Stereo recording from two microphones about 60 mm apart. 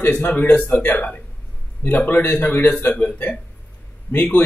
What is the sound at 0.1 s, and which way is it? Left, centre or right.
A man's voice, left.